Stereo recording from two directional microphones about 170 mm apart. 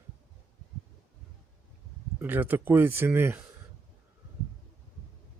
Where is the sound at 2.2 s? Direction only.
10° right (ahead or behind).